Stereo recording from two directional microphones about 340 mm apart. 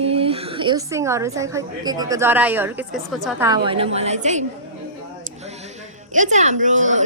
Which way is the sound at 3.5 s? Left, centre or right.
Centre.